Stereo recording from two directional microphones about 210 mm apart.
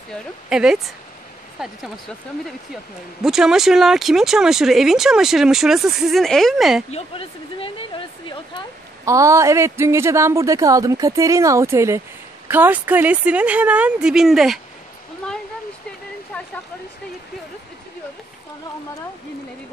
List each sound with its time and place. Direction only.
0.1 s speech: 5° right (ahead or behind)
6.9 s speech: 30° left (ahead or behind)
9.0 s a woman's voice: 15° right (ahead or behind)